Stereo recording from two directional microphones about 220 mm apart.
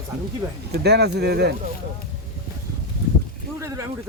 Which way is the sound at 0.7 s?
50° right (ahead or behind).